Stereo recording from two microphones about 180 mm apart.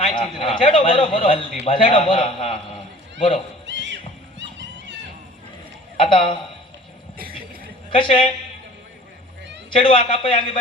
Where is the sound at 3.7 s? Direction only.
80° right.